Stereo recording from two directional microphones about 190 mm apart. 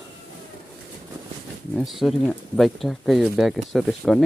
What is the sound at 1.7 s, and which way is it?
Speech, centre (ahead or behind).